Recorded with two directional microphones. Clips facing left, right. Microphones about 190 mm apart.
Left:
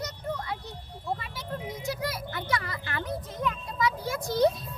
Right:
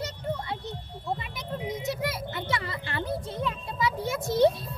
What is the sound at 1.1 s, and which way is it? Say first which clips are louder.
A child's voice: right 1 dB; 25° right (ahead or behind).